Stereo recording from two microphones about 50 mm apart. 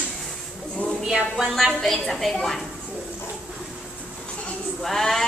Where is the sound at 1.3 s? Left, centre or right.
Centre.